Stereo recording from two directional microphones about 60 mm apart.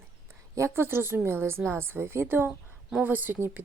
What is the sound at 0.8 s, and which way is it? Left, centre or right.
A woman's voice, right.